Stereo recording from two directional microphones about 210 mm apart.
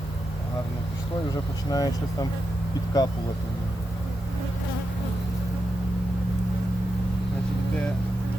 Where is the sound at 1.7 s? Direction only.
15° left (ahead or behind).